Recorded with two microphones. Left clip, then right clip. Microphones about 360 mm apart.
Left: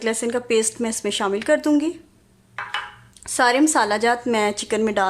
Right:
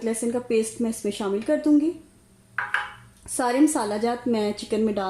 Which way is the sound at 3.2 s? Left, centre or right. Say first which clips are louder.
Left 4 dB; left.